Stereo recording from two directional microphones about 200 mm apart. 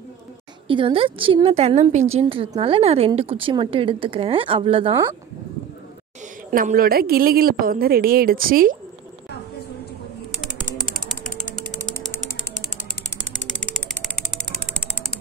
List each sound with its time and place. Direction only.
0.7 s a woman's voice: 25° right (ahead or behind)
6.5 s a woman's voice: 45° right (ahead or behind)
13.6 s mechanisms: centre (ahead or behind)